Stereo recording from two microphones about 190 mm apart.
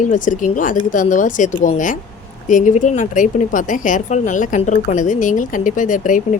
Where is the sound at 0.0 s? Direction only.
40° left (ahead or behind).